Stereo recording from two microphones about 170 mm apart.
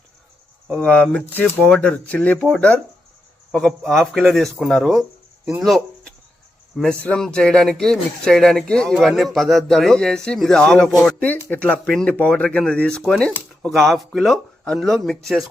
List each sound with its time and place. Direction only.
0.7 s speech: 5° left (ahead or behind)